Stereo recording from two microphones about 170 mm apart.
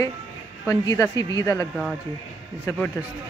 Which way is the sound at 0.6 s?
20° left (ahead or behind).